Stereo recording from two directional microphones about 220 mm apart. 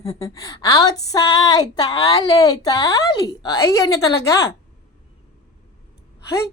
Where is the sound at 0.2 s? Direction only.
15° left (ahead or behind).